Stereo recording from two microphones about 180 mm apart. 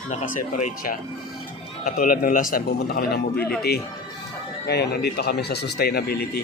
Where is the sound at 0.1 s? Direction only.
40° left (ahead or behind); by 3.5 s 60° left (ahead or behind).